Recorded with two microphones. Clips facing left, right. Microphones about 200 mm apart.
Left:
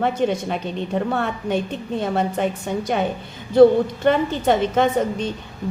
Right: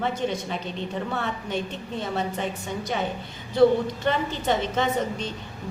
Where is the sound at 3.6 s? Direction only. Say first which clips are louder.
Left 6 dB; 50° left (ahead or behind).